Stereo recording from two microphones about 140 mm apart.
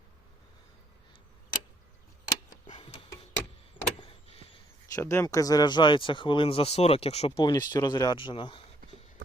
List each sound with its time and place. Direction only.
2.2 s tick: 30° left (ahead or behind)
3.8 s vehicle: 45° left (ahead or behind)
4.9 s speech: 20° left (ahead or behind); by 7.4 s 45° left (ahead or behind)
7.4 s speech: 30° left (ahead or behind)